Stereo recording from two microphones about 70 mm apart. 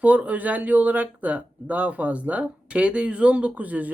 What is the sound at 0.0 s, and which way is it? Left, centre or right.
Speech, right.